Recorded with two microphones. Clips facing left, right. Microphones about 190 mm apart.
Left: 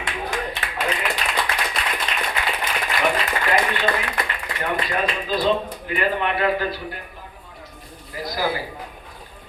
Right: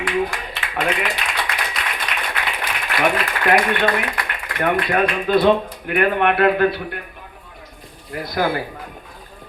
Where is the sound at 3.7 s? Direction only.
60° right (ahead or behind).